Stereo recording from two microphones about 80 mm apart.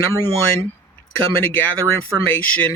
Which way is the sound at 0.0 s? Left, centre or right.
Left.